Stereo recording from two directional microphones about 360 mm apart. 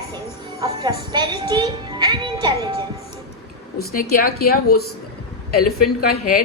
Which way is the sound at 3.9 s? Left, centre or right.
Left.